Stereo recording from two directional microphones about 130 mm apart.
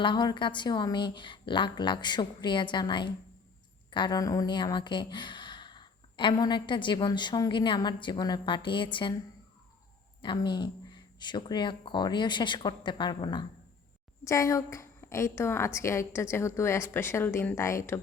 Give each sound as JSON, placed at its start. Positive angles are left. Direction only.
{"t": 0.0, "sound": "speech", "side_deg": 35}
{"t": 10.2, "sound": "a woman's voice", "side_deg": 35}